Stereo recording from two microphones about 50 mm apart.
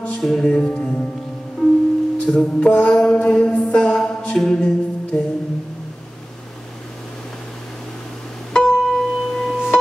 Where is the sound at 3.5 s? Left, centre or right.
Left.